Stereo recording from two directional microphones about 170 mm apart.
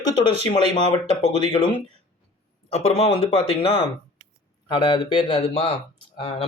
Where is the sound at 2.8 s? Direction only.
35° left (ahead or behind).